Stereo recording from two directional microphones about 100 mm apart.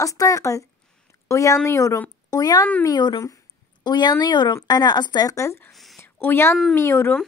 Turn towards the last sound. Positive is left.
turn(degrees=25)  # may be behind; listen again after turning